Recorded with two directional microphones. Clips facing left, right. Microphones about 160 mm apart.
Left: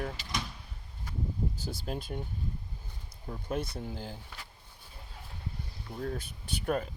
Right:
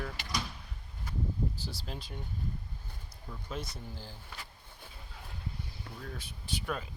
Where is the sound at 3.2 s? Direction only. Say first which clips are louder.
Left 6 dB; 55° left (ahead or behind).